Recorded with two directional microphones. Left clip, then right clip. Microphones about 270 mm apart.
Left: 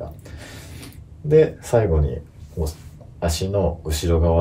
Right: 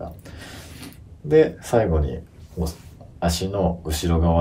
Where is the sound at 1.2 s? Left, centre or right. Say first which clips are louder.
Left 1 dB; centre.